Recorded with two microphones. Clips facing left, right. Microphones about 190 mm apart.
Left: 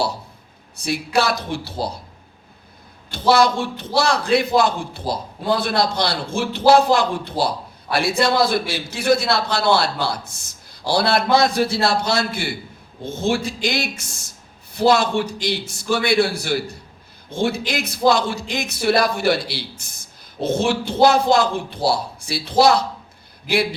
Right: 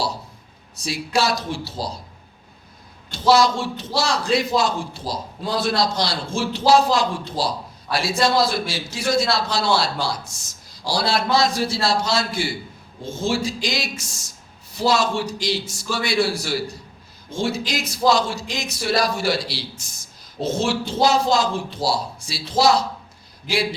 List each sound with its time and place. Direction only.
0.8 s a man's voice: 60° left (ahead or behind)
3.1 s a man's voice: 60° left (ahead or behind)